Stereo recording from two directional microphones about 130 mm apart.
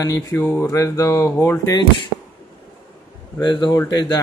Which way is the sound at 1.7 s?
35° left (ahead or behind).